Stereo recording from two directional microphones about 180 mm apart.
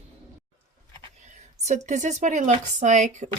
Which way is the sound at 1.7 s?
40° right (ahead or behind).